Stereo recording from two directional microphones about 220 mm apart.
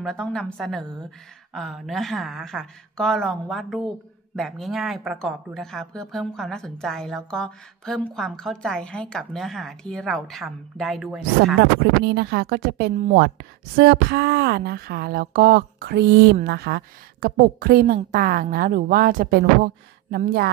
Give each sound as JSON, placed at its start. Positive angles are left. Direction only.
{"t": 0.0, "sound": "speech", "side_deg": 5}
{"t": 11.6, "sound": "a woman's voice", "side_deg": -50}